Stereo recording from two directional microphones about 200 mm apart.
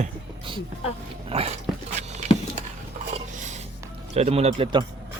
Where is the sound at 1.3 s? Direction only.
30° right (ahead or behind).